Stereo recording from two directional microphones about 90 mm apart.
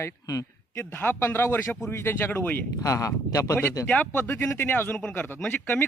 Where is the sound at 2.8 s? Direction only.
40° left (ahead or behind).